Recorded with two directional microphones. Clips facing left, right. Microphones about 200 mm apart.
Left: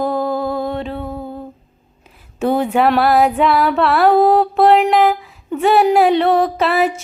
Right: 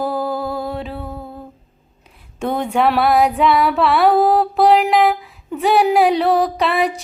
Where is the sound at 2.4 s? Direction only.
5° left (ahead or behind).